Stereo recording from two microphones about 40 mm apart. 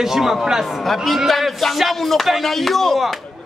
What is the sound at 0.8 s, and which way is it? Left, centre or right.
A man's voice, centre.